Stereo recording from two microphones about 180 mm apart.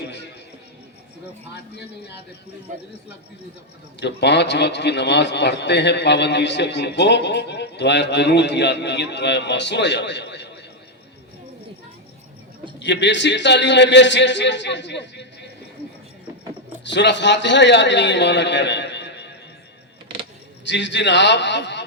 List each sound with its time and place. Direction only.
4.0 s a man's voice: 70° left (ahead or behind)
12.8 s a man's voice: 80° left
16.8 s a man's voice: 75° left (ahead or behind)
20.7 s a man's voice: 80° left